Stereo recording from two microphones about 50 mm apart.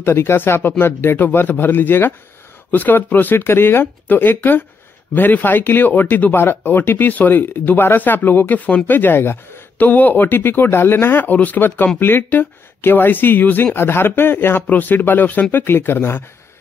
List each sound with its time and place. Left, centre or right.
0.0 s speech: left
9.8 s speech: left
14.7 s speech: left